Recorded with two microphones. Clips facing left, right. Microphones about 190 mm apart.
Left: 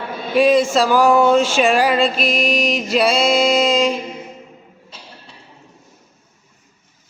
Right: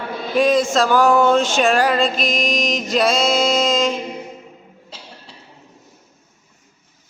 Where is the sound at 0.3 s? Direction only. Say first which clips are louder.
Left 2 dB; 5° left (ahead or behind).